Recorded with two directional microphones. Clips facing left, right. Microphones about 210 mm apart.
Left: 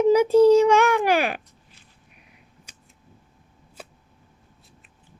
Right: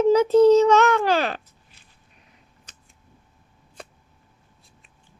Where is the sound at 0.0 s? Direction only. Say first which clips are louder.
Even; 10° left (ahead or behind).